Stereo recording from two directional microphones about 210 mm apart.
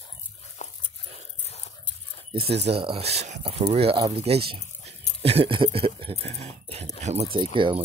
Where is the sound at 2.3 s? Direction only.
25° right (ahead or behind).